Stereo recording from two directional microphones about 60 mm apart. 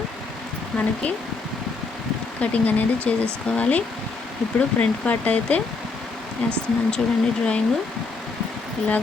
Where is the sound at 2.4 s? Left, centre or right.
Left.